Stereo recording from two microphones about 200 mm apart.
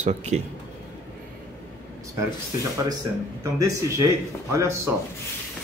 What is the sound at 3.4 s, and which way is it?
Speech, 15° right (ahead or behind).